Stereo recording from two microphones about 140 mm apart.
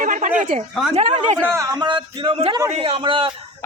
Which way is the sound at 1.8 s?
35° right (ahead or behind).